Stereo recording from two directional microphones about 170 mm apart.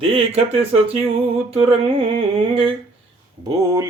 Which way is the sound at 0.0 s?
35° right (ahead or behind).